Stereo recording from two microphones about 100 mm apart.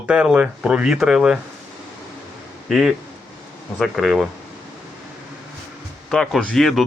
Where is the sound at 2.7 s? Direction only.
5° right (ahead or behind).